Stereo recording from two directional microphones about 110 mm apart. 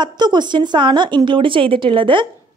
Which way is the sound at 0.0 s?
40° right (ahead or behind).